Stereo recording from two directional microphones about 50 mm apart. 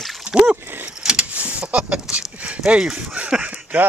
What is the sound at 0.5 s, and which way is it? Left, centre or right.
Vehicle, right.